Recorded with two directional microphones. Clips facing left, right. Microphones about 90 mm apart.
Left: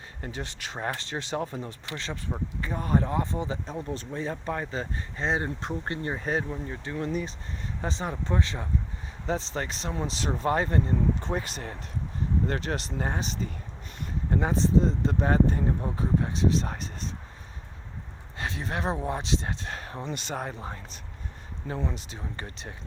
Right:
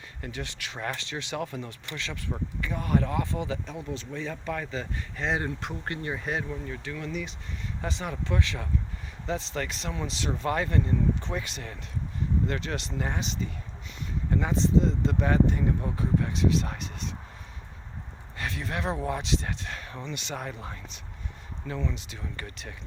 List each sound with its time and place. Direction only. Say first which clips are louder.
0.2 s speech: left 1 dB; 35° left (ahead or behind)
18.3 s speech: left 1 dB; 30° left (ahead or behind); by 22.0 s 50° left (ahead or behind)
22.1 s speech: left 1 dB; 30° left (ahead or behind)